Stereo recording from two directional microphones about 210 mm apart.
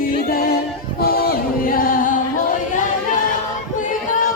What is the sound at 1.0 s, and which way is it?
Music, 45° left (ahead or behind).